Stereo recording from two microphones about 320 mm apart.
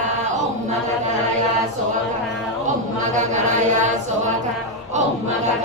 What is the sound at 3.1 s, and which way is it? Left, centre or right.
A capella, right.